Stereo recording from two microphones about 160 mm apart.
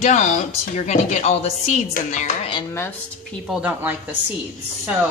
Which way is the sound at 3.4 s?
5° right (ahead or behind).